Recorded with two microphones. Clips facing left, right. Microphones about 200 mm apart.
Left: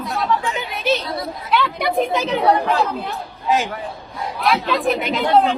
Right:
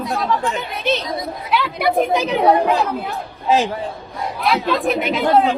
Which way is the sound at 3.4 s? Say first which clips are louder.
Right 3 dB; 30° right (ahead or behind).